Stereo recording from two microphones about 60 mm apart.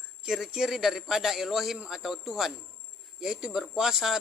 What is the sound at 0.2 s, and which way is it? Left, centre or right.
A man's voice, centre.